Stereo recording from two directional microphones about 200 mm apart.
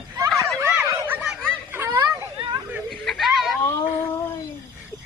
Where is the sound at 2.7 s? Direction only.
Centre (ahead or behind).